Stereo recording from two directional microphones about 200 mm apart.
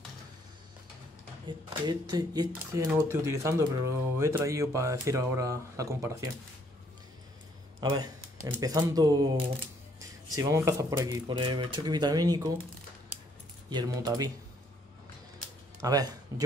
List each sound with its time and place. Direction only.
1.7 s speech: 20° right (ahead or behind)
7.8 s speech: 20° right (ahead or behind)
13.7 s speech: 20° right (ahead or behind)
15.8 s speech: 20° right (ahead or behind)